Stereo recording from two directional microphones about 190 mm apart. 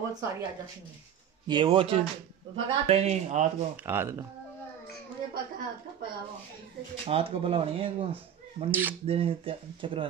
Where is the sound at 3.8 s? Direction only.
10° right (ahead or behind).